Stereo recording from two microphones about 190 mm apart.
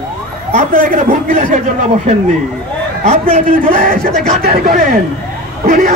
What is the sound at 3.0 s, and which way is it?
A man's voice, 35° right (ahead or behind).